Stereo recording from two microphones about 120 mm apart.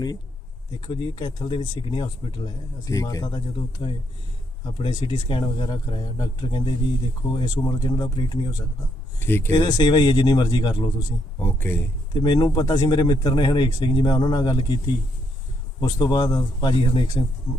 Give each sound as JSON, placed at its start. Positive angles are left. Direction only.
{"t": 0.9, "sound": "speech", "side_deg": 40}
{"t": 9.1, "sound": "speech", "side_deg": 20}
{"t": 9.5, "sound": "speech", "side_deg": 35}
{"t": 11.3, "sound": "speech", "side_deg": 20}
{"t": 12.2, "sound": "speech", "side_deg": 40}
{"t": 15.8, "sound": "speech", "side_deg": 35}